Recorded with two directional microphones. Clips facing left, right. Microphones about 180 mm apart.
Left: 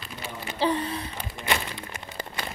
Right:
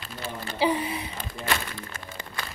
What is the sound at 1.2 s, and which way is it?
Crumpling, 15° left (ahead or behind).